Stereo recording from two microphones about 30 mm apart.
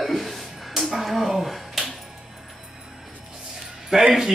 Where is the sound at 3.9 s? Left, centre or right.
Right.